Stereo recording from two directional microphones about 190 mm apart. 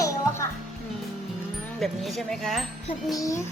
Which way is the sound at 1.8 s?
Centre (ahead or behind).